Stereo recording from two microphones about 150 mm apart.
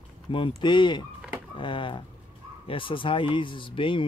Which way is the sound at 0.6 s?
30° left (ahead or behind).